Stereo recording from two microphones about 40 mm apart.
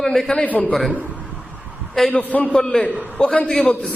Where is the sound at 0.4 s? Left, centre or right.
Left.